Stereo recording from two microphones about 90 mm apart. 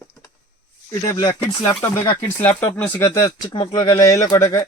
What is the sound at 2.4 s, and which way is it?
Speech, 15° left (ahead or behind).